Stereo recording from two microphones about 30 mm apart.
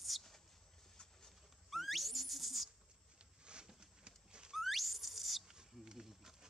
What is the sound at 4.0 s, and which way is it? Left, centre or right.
Horse, right.